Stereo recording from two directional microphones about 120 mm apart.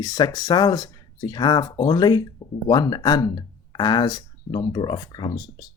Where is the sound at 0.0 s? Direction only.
35° left (ahead or behind).